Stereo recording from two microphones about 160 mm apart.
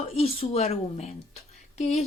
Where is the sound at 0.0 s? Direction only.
40° left (ahead or behind).